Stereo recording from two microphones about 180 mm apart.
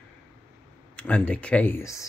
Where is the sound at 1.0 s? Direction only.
10° left (ahead or behind).